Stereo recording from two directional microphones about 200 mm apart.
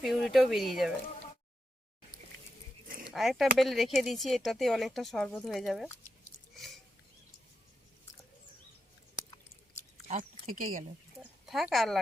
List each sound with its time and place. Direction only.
0.0 s speech: centre (ahead or behind)
2.8 s a sound: 45° right (ahead or behind)
3.1 s speech: centre (ahead or behind)
10.1 s speech: 40° right (ahead or behind)
11.4 s speech: centre (ahead or behind)